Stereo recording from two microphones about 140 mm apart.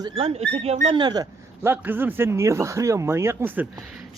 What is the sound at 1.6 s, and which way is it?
Speech, 15° right (ahead or behind).